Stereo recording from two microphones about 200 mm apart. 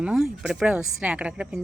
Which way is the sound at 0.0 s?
5° right (ahead or behind).